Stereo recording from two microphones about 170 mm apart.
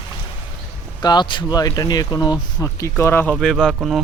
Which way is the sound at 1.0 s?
25° left (ahead or behind).